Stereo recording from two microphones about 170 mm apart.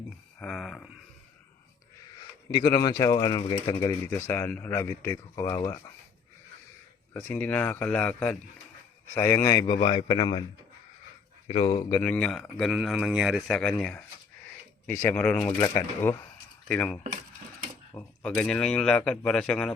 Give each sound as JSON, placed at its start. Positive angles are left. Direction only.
{"t": 0.3, "sound": "speech", "side_deg": 5}
{"t": 2.5, "sound": "speech", "side_deg": 25}
{"t": 7.3, "sound": "speech", "side_deg": 10}
{"t": 11.4, "sound": "speech", "side_deg": 35}
{"t": 12.0, "sound": "speech", "side_deg": 5}
{"t": 15.5, "sound": "speech", "side_deg": 20}
{"t": 16.6, "sound": "speech", "side_deg": 10}